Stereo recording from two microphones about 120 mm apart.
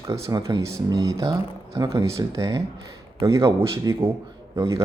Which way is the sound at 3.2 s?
40° right (ahead or behind).